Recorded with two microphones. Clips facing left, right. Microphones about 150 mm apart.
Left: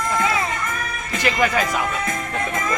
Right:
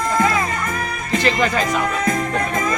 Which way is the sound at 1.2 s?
10° left (ahead or behind).